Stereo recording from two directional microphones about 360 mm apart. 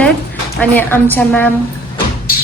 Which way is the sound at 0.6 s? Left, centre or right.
Centre.